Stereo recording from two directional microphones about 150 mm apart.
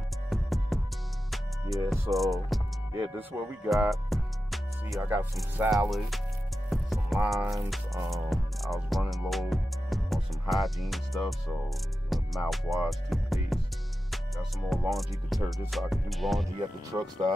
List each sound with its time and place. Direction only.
0.3 s music: centre (ahead or behind)
1.9 s music: centre (ahead or behind)
3.3 s speech: 20° right (ahead or behind)
3.9 s music: centre (ahead or behind)
5.0 s speech: 15° right (ahead or behind)
5.7 s music: centre (ahead or behind)
16.5 s speech: 25° right (ahead or behind)